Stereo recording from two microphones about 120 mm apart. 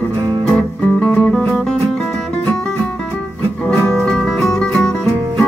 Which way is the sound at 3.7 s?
5° left (ahead or behind).